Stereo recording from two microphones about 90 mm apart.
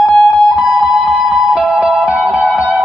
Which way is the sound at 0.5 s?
15° right (ahead or behind).